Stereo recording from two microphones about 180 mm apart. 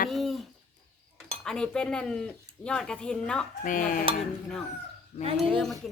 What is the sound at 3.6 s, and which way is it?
Speech, 50° left (ahead or behind).